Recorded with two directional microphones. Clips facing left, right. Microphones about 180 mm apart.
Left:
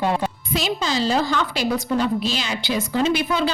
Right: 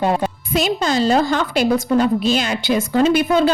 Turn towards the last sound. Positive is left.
turn(degrees=-50)  # may be behind; listen again after turning